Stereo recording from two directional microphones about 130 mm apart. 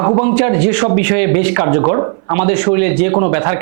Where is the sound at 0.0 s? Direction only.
25° right (ahead or behind).